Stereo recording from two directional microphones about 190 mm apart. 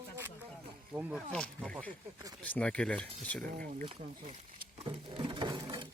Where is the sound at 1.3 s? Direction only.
5° left (ahead or behind).